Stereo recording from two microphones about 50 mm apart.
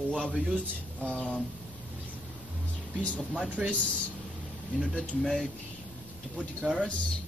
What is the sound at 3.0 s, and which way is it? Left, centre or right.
Speech, left.